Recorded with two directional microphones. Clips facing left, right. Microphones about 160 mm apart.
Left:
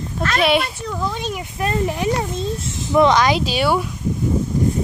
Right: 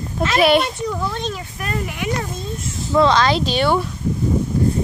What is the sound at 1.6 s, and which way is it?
Speech, 30° left (ahead or behind).